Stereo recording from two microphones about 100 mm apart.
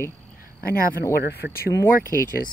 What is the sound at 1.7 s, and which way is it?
Speech, 25° left (ahead or behind).